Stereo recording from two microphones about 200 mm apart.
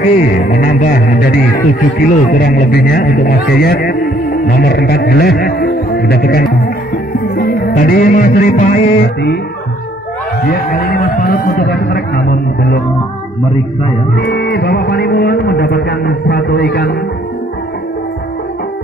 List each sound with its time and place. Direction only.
0.0 s music: 45° left (ahead or behind)
2.0 s a man's voice: 45° left (ahead or behind)
7.3 s music: 45° left (ahead or behind)
9.0 s music: 55° left (ahead or behind)
10.4 s music: 50° left (ahead or behind)
14.1 s a man's voice: 55° left (ahead or behind)